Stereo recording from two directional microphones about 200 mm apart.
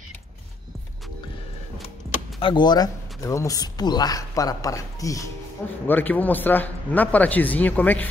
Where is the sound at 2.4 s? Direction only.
20° left (ahead or behind).